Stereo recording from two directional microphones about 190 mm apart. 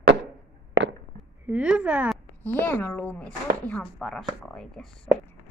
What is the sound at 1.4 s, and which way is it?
Speech, 5° right (ahead or behind).